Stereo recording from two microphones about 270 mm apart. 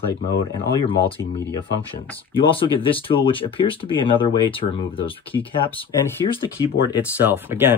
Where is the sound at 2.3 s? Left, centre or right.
Centre.